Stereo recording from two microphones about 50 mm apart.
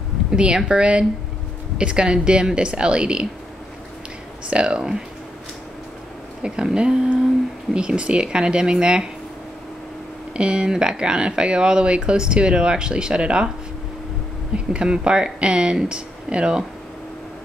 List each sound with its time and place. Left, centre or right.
0.3 s speech: centre
4.5 s speech: centre
6.4 s speech: centre
10.3 s speech: centre
14.5 s speech: centre